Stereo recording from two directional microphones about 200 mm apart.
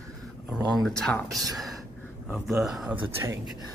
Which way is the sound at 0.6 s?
20° right (ahead or behind).